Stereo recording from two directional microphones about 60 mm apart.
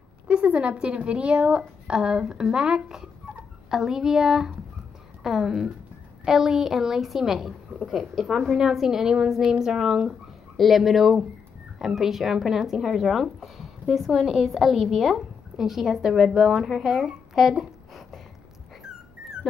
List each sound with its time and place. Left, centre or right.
0.3 s a woman's voice: right; by 18.2 s centre